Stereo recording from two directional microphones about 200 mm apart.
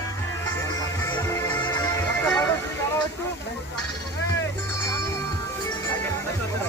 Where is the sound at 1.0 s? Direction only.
20° left (ahead or behind).